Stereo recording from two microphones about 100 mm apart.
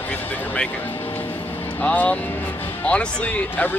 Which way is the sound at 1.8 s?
15° left (ahead or behind).